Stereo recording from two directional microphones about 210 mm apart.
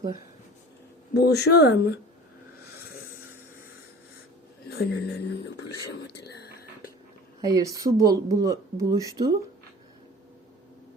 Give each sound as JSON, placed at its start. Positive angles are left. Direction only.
{"t": 1.1, "sound": "speech", "side_deg": 50}
{"t": 4.7, "sound": "speech", "side_deg": 50}
{"t": 6.2, "sound": "whispering", "side_deg": 50}
{"t": 7.4, "sound": "speech", "side_deg": -15}